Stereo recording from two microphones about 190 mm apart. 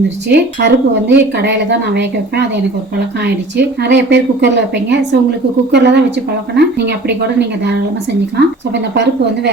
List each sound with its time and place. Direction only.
0.3 s speech: 65° right (ahead or behind)